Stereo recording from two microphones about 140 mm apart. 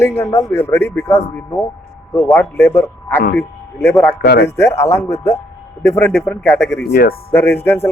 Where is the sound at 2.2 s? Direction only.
15° left (ahead or behind).